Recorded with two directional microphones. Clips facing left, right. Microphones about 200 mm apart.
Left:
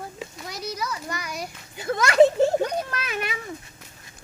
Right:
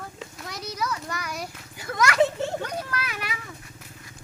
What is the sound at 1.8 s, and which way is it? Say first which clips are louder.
Speech: left 5 dB; 25° left (ahead or behind).